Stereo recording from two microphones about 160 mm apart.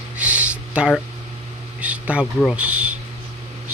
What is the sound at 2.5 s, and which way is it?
Speech, 10° right (ahead or behind).